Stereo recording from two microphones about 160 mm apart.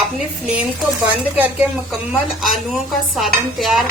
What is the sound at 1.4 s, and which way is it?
A woman's voice, 10° right (ahead or behind).